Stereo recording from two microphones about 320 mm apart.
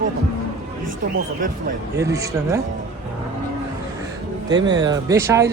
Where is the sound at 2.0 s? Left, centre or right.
Centre.